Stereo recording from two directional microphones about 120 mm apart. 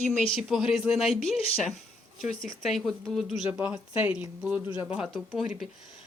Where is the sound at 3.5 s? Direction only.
10° right (ahead or behind).